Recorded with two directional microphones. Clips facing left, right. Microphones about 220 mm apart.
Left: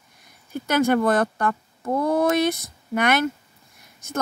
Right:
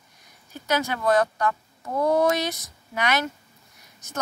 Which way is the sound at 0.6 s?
55° left (ahead or behind).